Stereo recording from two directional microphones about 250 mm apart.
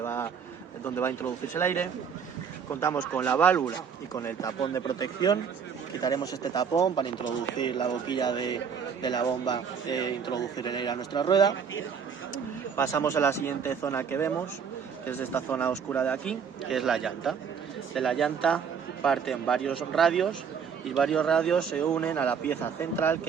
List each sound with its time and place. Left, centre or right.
0.0 s a sound: centre
0.9 s speech: centre
12.7 s a man's voice: centre